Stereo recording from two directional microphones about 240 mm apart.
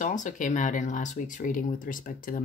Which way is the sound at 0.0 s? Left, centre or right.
Left.